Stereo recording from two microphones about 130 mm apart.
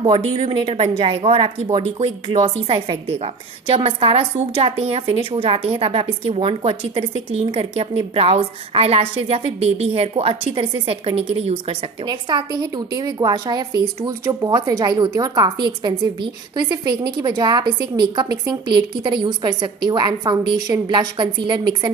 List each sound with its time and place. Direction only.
0.0 s speech: 40° right (ahead or behind)
12.1 s a woman's voice: 35° right (ahead or behind)